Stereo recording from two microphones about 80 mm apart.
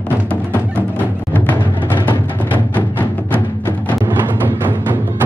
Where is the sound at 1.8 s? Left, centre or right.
Left.